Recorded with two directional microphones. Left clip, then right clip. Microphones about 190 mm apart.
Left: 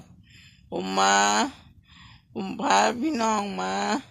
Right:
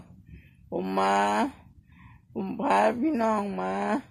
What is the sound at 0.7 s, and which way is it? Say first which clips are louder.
Speech: left 3 dB; 10° left (ahead or behind).